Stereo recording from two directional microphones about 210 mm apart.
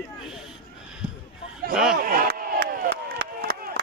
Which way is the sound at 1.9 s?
45° right (ahead or behind).